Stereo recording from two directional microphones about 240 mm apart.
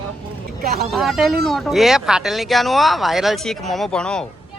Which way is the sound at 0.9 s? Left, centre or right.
Centre.